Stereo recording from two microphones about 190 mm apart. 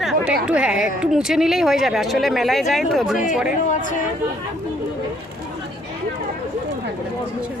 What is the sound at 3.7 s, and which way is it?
Speech, 45° left (ahead or behind).